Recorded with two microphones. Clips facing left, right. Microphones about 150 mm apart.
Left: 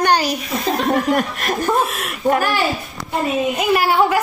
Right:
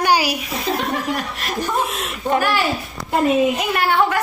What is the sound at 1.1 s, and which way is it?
Speech, 50° left (ahead or behind).